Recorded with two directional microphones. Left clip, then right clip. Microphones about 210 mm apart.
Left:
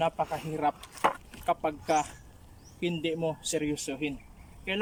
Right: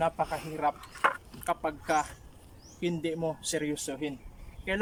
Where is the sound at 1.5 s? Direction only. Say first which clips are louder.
Left 2 dB; 10° left (ahead or behind).